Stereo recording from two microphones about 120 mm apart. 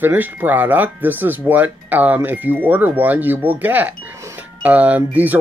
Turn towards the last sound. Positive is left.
turn(degrees=-15)  # may be behind; listen again after turning